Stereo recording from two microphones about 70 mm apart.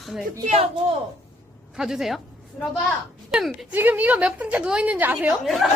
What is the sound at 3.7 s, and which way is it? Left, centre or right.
A woman's voice, right.